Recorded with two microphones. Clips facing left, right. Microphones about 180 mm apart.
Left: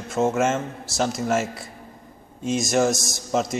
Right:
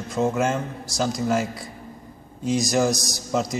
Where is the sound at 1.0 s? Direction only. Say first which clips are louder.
Even; centre (ahead or behind).